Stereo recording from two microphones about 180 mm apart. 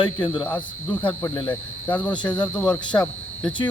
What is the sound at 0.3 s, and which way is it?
Cricket, 10° left (ahead or behind).